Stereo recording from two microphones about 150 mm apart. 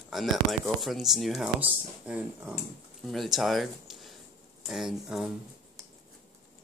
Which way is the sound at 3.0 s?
Centre (ahead or behind).